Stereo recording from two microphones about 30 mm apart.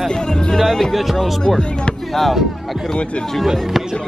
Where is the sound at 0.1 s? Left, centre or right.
Left.